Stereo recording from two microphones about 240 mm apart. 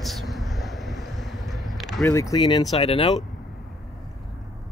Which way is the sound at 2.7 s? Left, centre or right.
Left.